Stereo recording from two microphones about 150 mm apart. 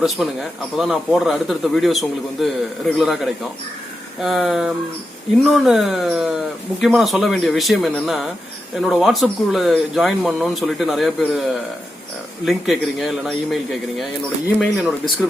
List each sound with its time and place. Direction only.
0.2 s speech: centre (ahead or behind)
12.5 s speech: centre (ahead or behind)